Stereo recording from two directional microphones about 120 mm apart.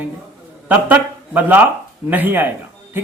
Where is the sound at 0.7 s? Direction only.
15° right (ahead or behind).